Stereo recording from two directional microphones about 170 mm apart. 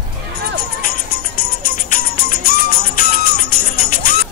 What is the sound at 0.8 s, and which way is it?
Music, 60° left (ahead or behind).